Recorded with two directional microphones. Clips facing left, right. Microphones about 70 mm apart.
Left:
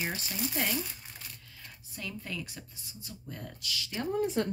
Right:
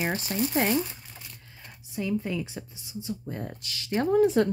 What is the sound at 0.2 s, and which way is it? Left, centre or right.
Speech, right.